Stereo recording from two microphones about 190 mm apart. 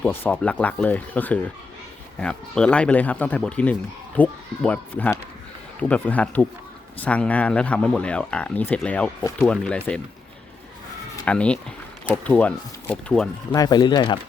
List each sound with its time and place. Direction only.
0.0 s speech: 10° left (ahead or behind)
11.3 s speech: 5° left (ahead or behind)
13.5 s speech: 20° left (ahead or behind)